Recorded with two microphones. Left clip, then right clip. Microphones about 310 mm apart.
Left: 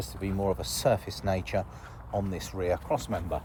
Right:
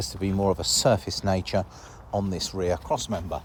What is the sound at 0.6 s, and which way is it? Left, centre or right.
Speech, right.